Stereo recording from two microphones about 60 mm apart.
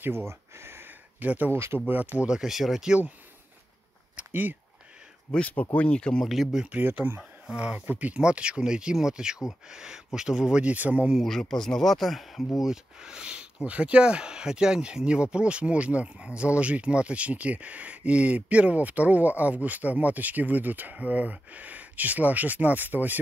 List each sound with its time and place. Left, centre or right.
0.3 s a sound: right
1.2 s speech: right
1.5 s speech: right
1.9 s speech: right
2.2 s speech: centre
4.2 s speech: right
5.3 s speech: left
6.2 s speech: centre
6.7 s speech: right
7.5 s speech: centre
8.2 s speech: centre
10.6 s speech: right
11.2 s speech: centre
12.6 s speech: centre; by 23.2 s right